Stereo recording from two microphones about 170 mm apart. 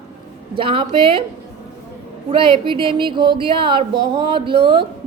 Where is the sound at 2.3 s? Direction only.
30° right (ahead or behind).